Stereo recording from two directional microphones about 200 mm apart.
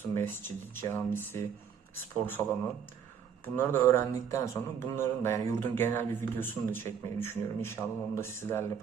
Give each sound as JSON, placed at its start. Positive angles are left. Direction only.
{"t": 0.1, "sound": "speech", "side_deg": 10}